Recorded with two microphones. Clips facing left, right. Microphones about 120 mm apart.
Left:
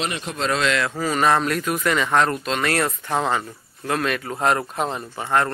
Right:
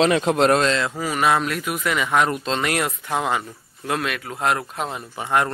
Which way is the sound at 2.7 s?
10° right (ahead or behind).